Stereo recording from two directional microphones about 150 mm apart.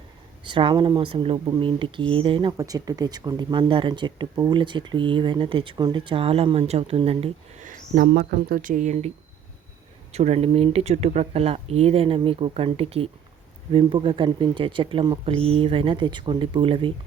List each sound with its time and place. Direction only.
0.4 s speech: 35° right (ahead or behind)
2.6 s speech: 25° right (ahead or behind); by 7.3 s 40° right (ahead or behind)
7.6 s speech: 70° right (ahead or behind); by 16.9 s 35° right (ahead or behind)